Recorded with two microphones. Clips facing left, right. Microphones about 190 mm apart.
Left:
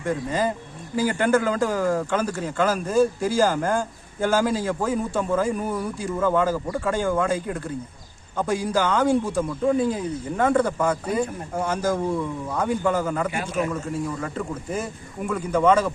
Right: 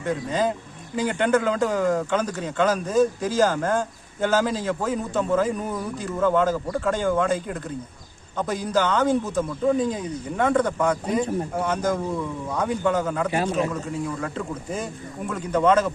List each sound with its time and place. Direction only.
0.0 s speech: 10° left (ahead or behind)
13.4 s a man's voice: 30° right (ahead or behind)
14.2 s speech: 5° left (ahead or behind)